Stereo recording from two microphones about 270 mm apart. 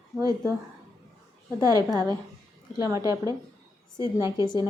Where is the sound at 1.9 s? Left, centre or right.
Centre.